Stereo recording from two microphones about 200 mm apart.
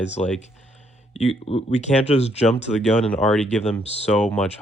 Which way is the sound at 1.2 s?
30° left (ahead or behind).